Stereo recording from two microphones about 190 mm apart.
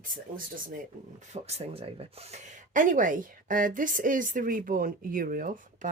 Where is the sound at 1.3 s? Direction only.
35° right (ahead or behind).